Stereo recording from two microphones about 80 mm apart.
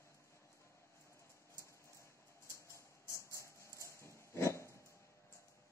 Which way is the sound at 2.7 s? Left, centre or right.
Left.